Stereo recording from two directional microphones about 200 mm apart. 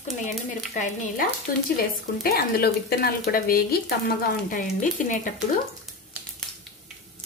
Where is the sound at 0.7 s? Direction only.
35° left (ahead or behind).